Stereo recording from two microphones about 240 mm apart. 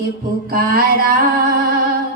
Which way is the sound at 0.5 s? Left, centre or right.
Right.